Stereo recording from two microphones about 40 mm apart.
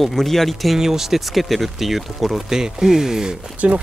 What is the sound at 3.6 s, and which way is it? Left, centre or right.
Speech, right.